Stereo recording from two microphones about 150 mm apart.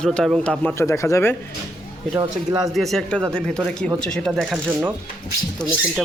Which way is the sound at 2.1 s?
25° right (ahead or behind).